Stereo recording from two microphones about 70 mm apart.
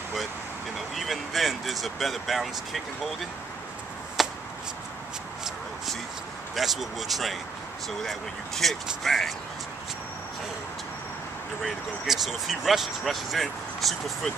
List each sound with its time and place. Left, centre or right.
0.7 s speech: centre
4.2 s a sound: centre
6.5 s speech: centre
11.6 s speech: centre